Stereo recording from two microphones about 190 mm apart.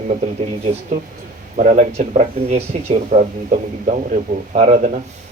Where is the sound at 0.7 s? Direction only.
35° right (ahead or behind).